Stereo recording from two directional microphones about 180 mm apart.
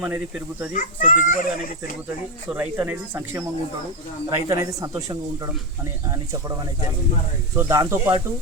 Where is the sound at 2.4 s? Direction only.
10° right (ahead or behind).